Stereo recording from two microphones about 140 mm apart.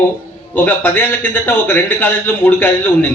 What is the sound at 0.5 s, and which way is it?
A man's voice, 15° left (ahead or behind).